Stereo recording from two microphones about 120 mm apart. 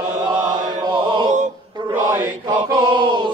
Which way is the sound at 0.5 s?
40° right (ahead or behind).